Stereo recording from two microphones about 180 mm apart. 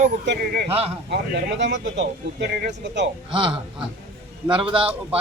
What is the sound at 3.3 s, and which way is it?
Speech, 30° right (ahead or behind).